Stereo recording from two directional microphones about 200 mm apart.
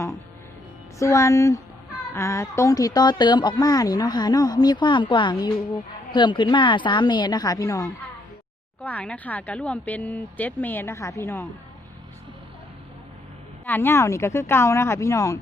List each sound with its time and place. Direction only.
0.9 s a woman's voice: 15° left (ahead or behind)
13.7 s speech: 10° left (ahead or behind)